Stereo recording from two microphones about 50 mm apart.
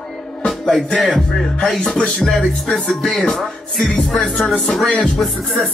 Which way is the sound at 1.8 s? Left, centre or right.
Centre.